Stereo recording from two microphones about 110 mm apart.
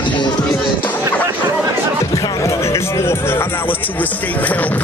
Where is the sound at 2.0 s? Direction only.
30° left (ahead or behind).